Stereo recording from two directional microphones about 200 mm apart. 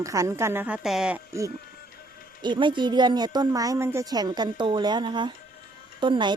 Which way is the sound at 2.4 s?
25° right (ahead or behind).